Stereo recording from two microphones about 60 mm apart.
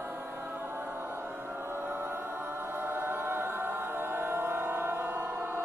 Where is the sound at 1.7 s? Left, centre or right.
Right.